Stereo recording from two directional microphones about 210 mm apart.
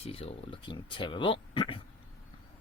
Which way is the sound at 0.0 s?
30° left (ahead or behind).